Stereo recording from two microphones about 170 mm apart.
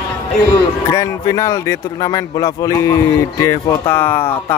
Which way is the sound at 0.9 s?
20° left (ahead or behind).